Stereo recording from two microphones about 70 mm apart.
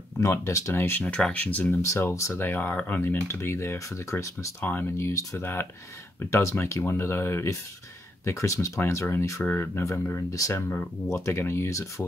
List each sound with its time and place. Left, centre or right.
0.2 s speech: left
0.7 s speech: left
1.0 s speech: centre
1.9 s speech: left
2.3 s speech: left
10.5 s speech: left
11.1 s speech: left